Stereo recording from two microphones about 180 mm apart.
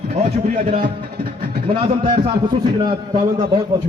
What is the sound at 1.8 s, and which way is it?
A man's voice, 30° right (ahead or behind).